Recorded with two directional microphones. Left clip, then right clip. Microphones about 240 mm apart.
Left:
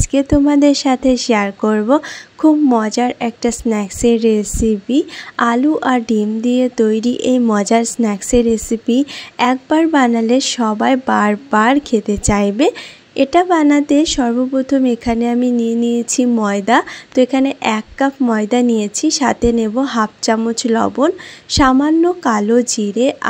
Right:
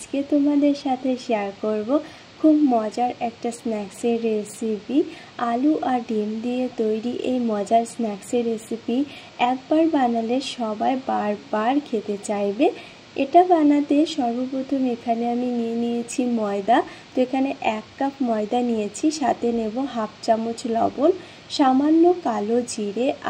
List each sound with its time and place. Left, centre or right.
0.0 s a woman's voice: left